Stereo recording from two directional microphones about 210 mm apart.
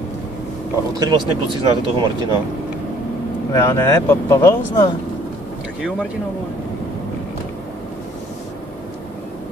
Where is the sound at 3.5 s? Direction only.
15° left (ahead or behind).